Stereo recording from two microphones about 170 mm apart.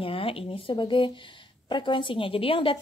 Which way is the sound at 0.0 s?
35° left (ahead or behind).